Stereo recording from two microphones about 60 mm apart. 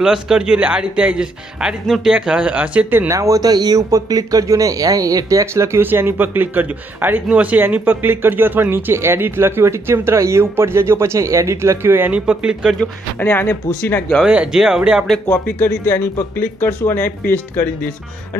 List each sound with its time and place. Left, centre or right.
0.0 s speech: centre
3.1 s speech: right
5.5 s speech: right
12.1 s speech: centre
13.2 s speech: left
14.2 s speech: centre
15.3 s speech: left